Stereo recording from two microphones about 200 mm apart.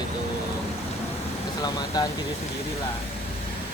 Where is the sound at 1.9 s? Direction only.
20° left (ahead or behind).